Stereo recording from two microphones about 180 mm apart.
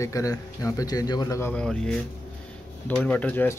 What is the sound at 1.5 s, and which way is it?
Speech, 5° left (ahead or behind).